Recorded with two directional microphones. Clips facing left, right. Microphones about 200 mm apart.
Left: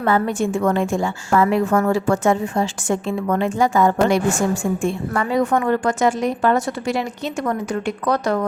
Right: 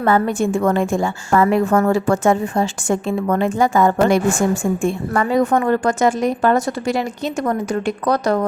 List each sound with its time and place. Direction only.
0.0 s a woman's voice: 50° right (ahead or behind)